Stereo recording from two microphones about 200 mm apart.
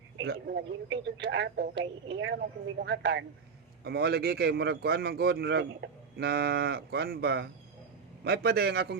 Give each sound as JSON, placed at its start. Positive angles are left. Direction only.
{"t": 0.2, "sound": "speech", "side_deg": -55}